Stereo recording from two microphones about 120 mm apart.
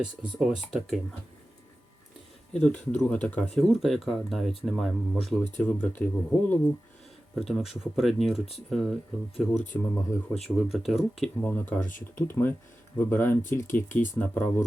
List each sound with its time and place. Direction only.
0.3 s speech: 5° right (ahead or behind)
2.5 s speech: 5° left (ahead or behind)
5.5 s speech: 15° left (ahead or behind)
7.3 s speech: centre (ahead or behind)
9.7 s speech: 15° left (ahead or behind)
10.4 s speech: centre (ahead or behind)
11.4 s speech: 15° left (ahead or behind)
11.8 s speech: 90° left
12.1 s speech: 15° left (ahead or behind)